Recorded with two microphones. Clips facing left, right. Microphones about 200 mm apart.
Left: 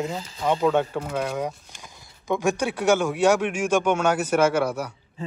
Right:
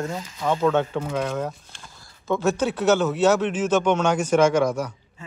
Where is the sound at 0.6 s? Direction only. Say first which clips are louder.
Right 2 dB; 5° left (ahead or behind).